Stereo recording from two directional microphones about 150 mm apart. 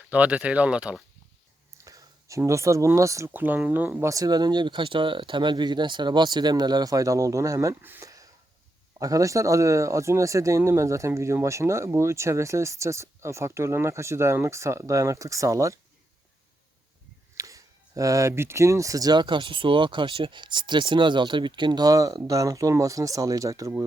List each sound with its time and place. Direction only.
0.1 s speech: 10° right (ahead or behind)
1.8 s speech: 20° right (ahead or behind)
17.3 s speech: 20° right (ahead or behind)